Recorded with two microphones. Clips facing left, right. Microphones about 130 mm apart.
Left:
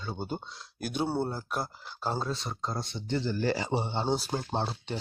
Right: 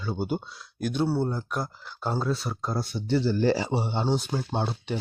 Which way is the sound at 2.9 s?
20° left (ahead or behind).